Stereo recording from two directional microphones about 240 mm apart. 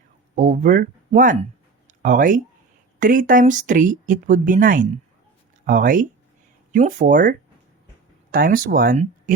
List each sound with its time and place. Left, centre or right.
0.3 s speech: right